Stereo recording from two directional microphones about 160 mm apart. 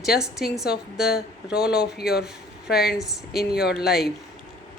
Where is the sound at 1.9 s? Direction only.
75° left (ahead or behind).